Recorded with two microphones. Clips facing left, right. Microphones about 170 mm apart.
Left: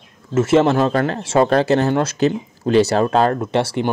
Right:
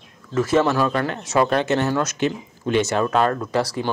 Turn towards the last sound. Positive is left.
turn(degrees=25)  # may be behind; listen again after turning